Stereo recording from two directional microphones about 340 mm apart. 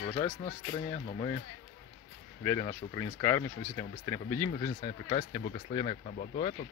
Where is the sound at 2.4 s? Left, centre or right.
Centre.